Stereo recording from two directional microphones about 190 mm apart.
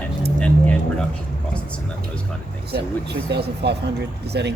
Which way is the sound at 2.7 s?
60° right (ahead or behind).